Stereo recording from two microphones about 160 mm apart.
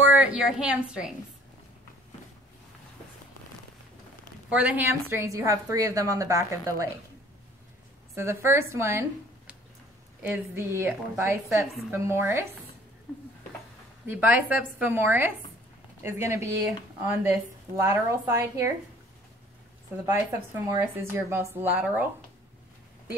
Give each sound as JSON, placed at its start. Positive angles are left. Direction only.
{"t": 0.1, "sound": "a woman's voice", "side_deg": -5}
{"t": 4.5, "sound": "a woman's voice", "side_deg": -10}
{"t": 8.1, "sound": "speech", "side_deg": -15}
{"t": 10.2, "sound": "speech", "side_deg": -15}
{"t": 14.0, "sound": "speech", "side_deg": -10}
{"t": 20.1, "sound": "speech", "side_deg": -20}